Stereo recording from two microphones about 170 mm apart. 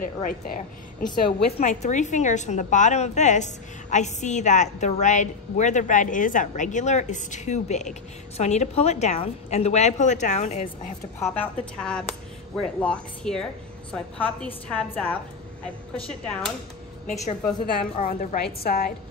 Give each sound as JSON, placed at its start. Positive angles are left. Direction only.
{"t": 0.0, "sound": "a woman's voice", "side_deg": 55}
{"t": 1.6, "sound": "a woman's voice", "side_deg": 40}
{"t": 11.1, "sound": "a woman's voice", "side_deg": 10}
{"t": 17.1, "sound": "a woman's voice", "side_deg": 40}
{"t": 18.0, "sound": "a woman's voice", "side_deg": 55}